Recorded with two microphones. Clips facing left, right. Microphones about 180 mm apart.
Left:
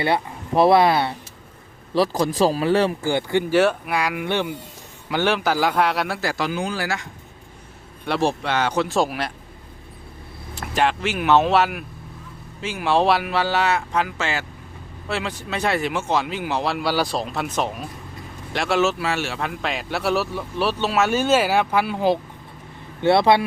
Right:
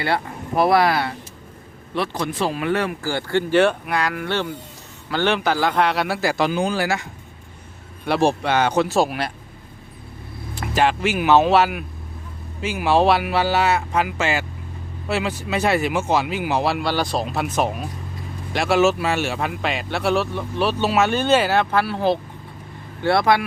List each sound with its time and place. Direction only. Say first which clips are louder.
0.0 s speech: left 1 dB; 25° left (ahead or behind)
2.0 s speech: left 5 dB; 35° left (ahead or behind)
3.1 s speech: left 1 dB; 15° left (ahead or behind)
3.5 s speech: right 2 dB; 5° left (ahead or behind)
6.4 s speech: right 6 dB; 25° right (ahead or behind)
6.8 s speech: right 4 dB; 10° right (ahead or behind)
10.5 s speech: right 2 dB; centre (ahead or behind)
16.8 s speech: even; 5° left (ahead or behind); by 23.4 s 25° left (ahead or behind)